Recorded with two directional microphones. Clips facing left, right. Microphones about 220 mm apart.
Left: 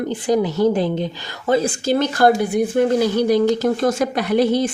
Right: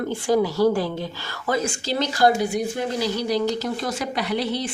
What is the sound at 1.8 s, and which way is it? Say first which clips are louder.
Speech: left 3 dB; 50° left (ahead or behind).